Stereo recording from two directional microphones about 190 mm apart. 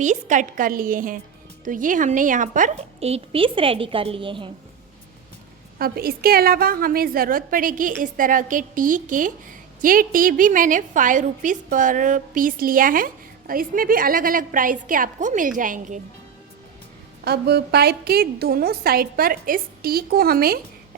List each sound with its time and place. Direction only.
0.0 s a woman's voice: 40° right (ahead or behind)
5.8 s a woman's voice: 50° right (ahead or behind)
17.2 s a woman's voice: 55° right (ahead or behind)